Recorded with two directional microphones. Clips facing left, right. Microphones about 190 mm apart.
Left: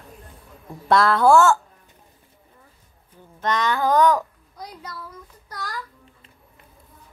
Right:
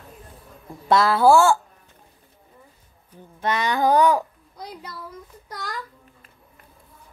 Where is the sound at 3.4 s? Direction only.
10° right (ahead or behind).